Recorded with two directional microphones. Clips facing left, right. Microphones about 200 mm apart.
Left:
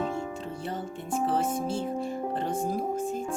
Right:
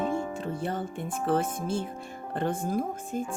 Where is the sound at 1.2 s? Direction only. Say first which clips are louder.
Right 1 dB; 55° right (ahead or behind).